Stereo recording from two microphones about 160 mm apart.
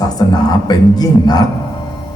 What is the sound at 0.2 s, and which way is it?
Speech, 25° left (ahead or behind).